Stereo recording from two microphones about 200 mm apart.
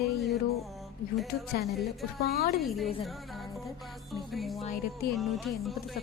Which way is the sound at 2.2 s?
50° left (ahead or behind).